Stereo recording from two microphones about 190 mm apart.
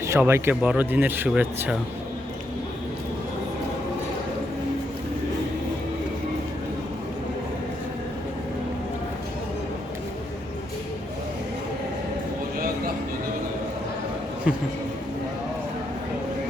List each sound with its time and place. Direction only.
0.1 s speech: 15° right (ahead or behind)